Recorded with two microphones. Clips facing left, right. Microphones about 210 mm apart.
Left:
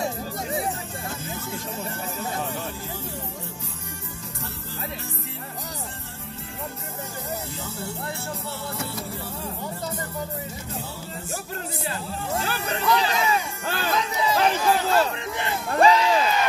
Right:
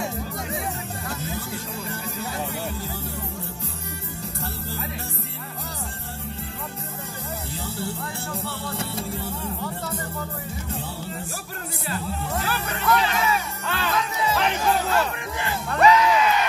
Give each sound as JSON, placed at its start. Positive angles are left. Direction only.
{"t": 0.0, "sound": "music", "side_deg": 35}
{"t": 7.6, "sound": "music", "side_deg": -30}
{"t": 11.9, "sound": "music", "side_deg": 30}